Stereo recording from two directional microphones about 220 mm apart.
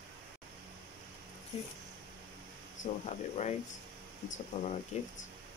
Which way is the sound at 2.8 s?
30° left (ahead or behind).